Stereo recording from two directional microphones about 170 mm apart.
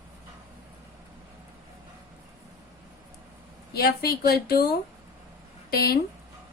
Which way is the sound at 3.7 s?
65° left (ahead or behind).